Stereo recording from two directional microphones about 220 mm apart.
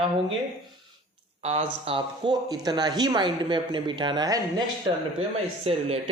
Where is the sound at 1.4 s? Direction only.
30° right (ahead or behind).